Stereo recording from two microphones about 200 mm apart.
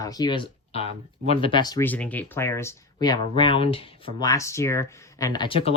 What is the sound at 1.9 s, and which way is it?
Speech, 10° left (ahead or behind).